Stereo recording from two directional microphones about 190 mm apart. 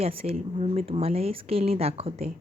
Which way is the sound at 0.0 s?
30° right (ahead or behind).